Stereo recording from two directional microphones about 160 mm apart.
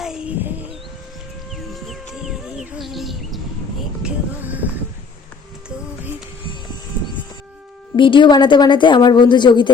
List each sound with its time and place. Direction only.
0.0 s a sound: 5° right (ahead or behind)
4.0 s music: 10° right (ahead or behind)
5.6 s music: 5° right (ahead or behind)
7.9 s a woman's voice: 30° left (ahead or behind)